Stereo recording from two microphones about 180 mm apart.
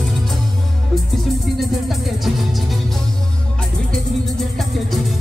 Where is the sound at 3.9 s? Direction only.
Centre (ahead or behind).